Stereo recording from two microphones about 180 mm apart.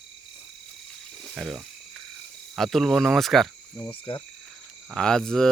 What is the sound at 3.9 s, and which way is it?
Cricket, 30° left (ahead or behind).